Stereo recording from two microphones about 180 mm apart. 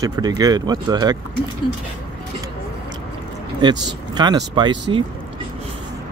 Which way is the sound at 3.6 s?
25° right (ahead or behind).